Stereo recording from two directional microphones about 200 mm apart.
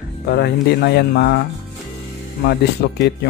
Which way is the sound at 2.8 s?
55° left (ahead or behind).